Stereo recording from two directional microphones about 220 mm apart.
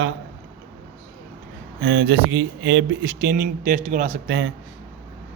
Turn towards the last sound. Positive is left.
turn(degrees=-55)  # may be behind; listen again after turning